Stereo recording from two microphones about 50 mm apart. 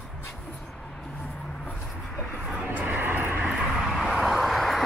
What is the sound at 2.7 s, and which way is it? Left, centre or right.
Vehicle, right.